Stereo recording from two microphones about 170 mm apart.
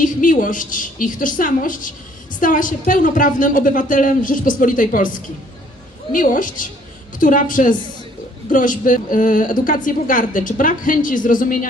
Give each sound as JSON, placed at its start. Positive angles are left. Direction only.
{"t": 0.0, "sound": "a woman's voice", "side_deg": 50}